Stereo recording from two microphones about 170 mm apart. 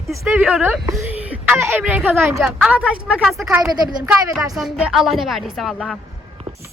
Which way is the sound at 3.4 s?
20° right (ahead or behind).